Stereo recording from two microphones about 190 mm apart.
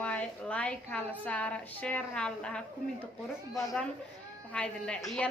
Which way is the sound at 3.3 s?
15° left (ahead or behind).